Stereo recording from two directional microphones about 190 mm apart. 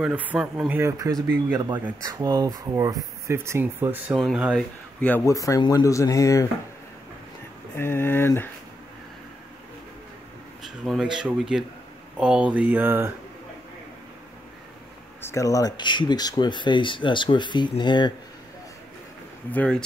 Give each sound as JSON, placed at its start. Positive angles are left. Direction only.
{"t": 0.0, "sound": "speech", "side_deg": -5}
{"t": 5.0, "sound": "speech", "side_deg": 10}
{"t": 7.7, "sound": "speech", "side_deg": 10}
{"t": 10.6, "sound": "speech", "side_deg": 0}
{"t": 15.2, "sound": "speech", "side_deg": 15}
{"t": 19.5, "sound": "speech", "side_deg": 5}